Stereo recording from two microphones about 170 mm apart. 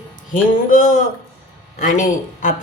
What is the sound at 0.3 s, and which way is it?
Speech, 50° left (ahead or behind).